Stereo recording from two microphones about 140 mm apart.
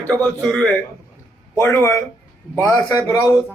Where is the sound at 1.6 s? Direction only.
20° left (ahead or behind).